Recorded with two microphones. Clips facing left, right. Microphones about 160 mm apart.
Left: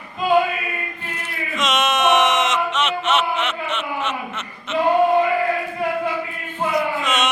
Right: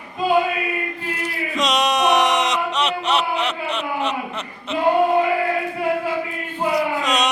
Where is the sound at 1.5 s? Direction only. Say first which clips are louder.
Right 1 dB; 35° right (ahead or behind).